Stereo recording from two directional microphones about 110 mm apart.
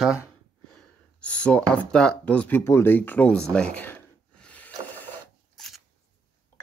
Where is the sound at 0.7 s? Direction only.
10° left (ahead or behind).